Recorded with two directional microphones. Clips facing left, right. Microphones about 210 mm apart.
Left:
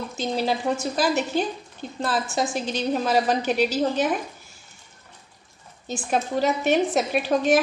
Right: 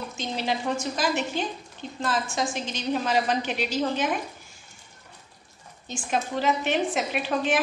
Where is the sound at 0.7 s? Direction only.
40° left (ahead or behind).